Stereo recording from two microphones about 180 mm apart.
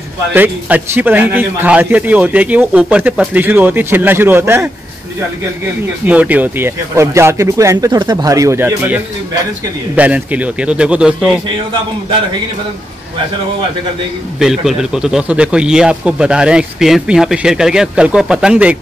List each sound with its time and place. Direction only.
0.3 s a man's voice: 10° right (ahead or behind)
6.0 s a man's voice: 10° right (ahead or behind)
14.4 s a man's voice: centre (ahead or behind)